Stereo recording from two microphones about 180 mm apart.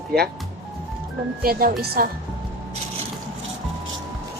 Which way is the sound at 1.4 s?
55° right (ahead or behind).